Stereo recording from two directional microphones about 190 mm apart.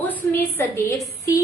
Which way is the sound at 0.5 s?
15° left (ahead or behind).